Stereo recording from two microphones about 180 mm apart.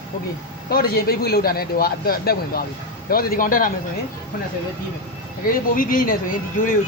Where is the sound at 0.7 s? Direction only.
55° left (ahead or behind).